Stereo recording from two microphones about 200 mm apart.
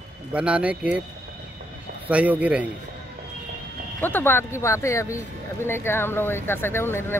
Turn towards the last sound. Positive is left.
turn(degrees=10)  # may be behind; listen again after turning